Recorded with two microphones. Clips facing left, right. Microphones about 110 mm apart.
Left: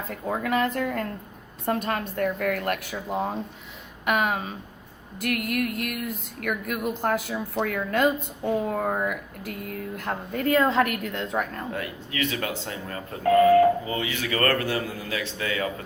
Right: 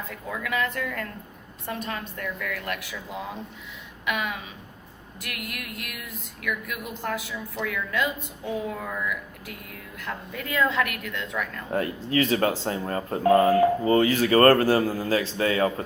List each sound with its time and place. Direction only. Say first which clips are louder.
0.1 s speech: left 6 dB; 40° left (ahead or behind)
1.6 s a woman's voice: left 6 dB; 50° left (ahead or behind)
11.7 s speech: right 7 dB; 35° right (ahead or behind)